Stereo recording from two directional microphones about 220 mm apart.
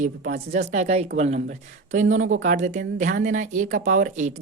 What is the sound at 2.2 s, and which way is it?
Speech, 65° right (ahead or behind).